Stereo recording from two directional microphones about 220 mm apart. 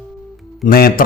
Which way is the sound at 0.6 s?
45° left (ahead or behind).